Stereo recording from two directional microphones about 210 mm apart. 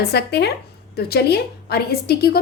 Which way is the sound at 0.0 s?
50° left (ahead or behind).